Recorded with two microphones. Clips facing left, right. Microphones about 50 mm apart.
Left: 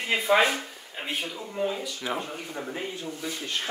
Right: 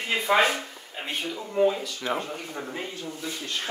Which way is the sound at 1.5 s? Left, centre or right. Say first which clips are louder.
Right 7 dB; centre.